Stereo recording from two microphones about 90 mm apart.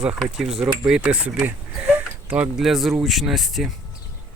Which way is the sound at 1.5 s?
20° right (ahead or behind).